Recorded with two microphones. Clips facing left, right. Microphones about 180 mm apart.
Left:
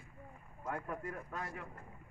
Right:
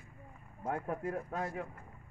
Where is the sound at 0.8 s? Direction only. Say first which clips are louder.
Right 6 dB; 40° right (ahead or behind).